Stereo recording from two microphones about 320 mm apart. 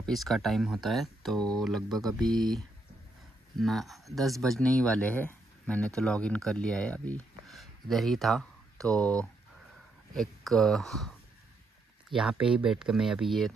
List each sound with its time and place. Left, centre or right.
0.0 s speech: centre
12.1 s speech: centre